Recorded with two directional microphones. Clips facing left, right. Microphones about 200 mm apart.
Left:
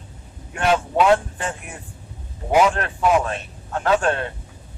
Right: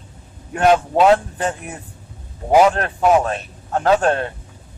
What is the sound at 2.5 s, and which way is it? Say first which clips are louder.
Speech: right 4 dB; 40° right (ahead or behind).